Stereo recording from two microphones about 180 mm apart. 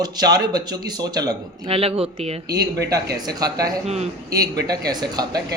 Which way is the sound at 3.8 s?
35° right (ahead or behind).